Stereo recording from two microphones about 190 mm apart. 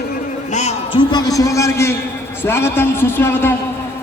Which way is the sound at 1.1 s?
20° left (ahead or behind).